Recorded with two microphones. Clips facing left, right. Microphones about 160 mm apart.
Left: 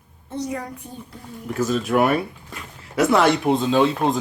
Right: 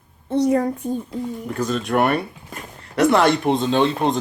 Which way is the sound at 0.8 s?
40° right (ahead or behind).